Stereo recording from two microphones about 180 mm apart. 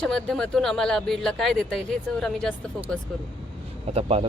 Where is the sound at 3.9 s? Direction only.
35° right (ahead or behind).